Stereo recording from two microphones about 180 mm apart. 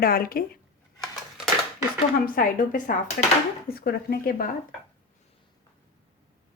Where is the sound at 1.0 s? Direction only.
Centre (ahead or behind).